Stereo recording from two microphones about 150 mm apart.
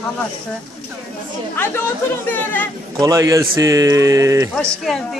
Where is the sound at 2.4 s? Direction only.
10° left (ahead or behind).